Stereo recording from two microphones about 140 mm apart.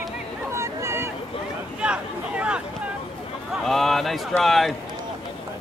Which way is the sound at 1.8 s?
10° right (ahead or behind).